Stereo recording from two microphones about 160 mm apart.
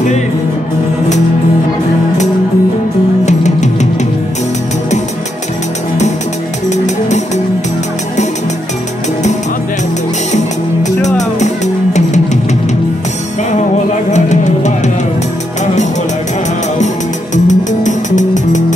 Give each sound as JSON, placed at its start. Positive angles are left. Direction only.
{"t": 3.3, "sound": "music", "side_deg": 45}
{"t": 10.3, "sound": "music", "side_deg": 45}
{"t": 14.1, "sound": "music", "side_deg": 45}
{"t": 17.5, "sound": "music", "side_deg": 50}